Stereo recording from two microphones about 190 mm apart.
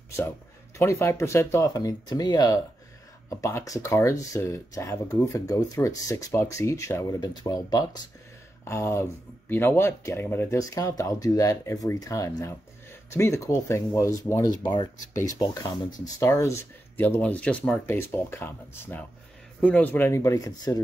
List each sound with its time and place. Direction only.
0.7 s speech: 15° left (ahead or behind)